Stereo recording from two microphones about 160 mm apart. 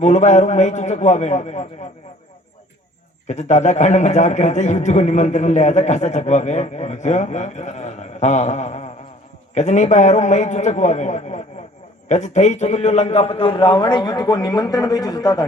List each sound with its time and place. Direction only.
0.0 s a man's voice: 50° left (ahead or behind)
3.2 s a man's voice: 45° left (ahead or behind); by 15.4 s 25° left (ahead or behind)